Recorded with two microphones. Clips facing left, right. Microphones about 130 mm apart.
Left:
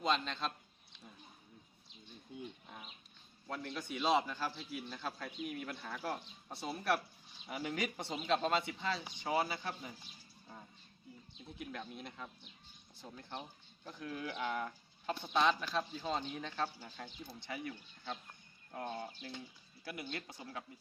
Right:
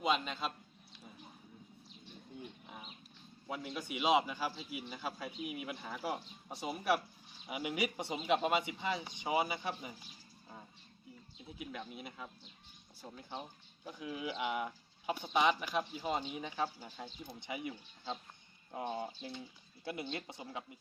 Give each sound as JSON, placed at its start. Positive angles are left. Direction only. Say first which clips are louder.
{"t": 0.0, "sound": "a man's voice", "louder": "right 1 dB", "side_deg": -10}
{"t": 3.4, "sound": "speech", "louder": "right 1 dB", "side_deg": -10}
{"t": 11.3, "sound": "speech", "louder": "right 1 dB", "side_deg": -5}